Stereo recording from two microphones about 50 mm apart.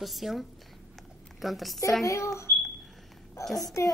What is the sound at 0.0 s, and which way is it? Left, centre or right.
A woman's voice, centre.